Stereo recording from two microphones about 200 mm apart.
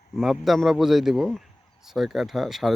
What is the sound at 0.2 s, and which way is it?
Speech, centre (ahead or behind).